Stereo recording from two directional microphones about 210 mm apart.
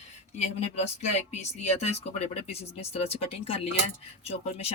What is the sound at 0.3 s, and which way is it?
Speech, 30° left (ahead or behind).